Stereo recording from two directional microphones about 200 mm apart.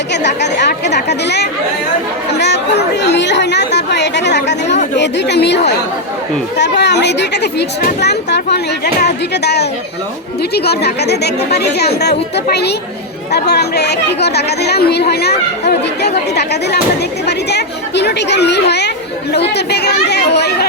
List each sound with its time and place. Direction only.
0.1 s speech: 60° left (ahead or behind)
13.3 s speech: 55° left (ahead or behind)